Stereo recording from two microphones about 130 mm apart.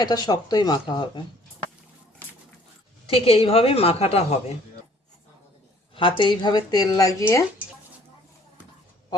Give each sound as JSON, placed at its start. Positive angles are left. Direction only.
{"t": 0.0, "sound": "speech", "side_deg": 30}
{"t": 3.1, "sound": "a woman's voice", "side_deg": 45}
{"t": 5.9, "sound": "speech", "side_deg": 40}